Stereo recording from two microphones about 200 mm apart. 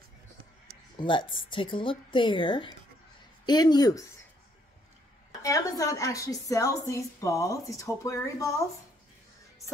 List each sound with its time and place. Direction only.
0.9 s speech: 25° left (ahead or behind)
5.4 s a woman's voice: 15° left (ahead or behind)